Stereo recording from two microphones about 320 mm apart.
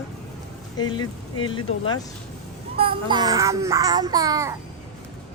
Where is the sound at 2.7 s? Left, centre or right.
Centre.